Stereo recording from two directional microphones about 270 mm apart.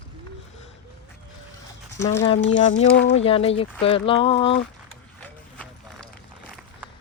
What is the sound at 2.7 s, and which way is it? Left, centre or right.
Speech, left.